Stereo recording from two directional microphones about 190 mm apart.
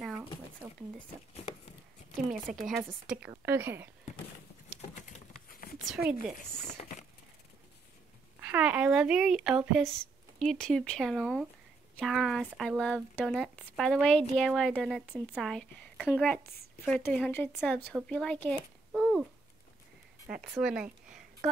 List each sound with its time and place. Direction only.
0.0 s a sound: centre (ahead or behind)
2.5 s speech: centre (ahead or behind)
4.9 s patter: 40° left (ahead or behind)
6.6 s crumpling: 35° left (ahead or behind)
8.4 s a woman's voice: 10° right (ahead or behind)
18.9 s a sound: 5° right (ahead or behind)
20.2 s speech: centre (ahead or behind)